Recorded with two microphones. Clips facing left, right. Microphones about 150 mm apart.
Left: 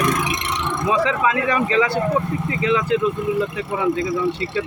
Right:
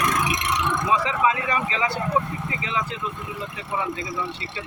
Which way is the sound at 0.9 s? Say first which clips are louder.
Left 3 dB; 70° left (ahead or behind).